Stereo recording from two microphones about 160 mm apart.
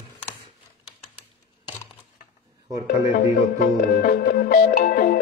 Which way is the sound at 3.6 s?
70° left (ahead or behind).